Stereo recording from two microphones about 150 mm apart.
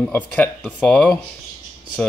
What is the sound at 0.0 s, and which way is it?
Speech, 10° left (ahead or behind).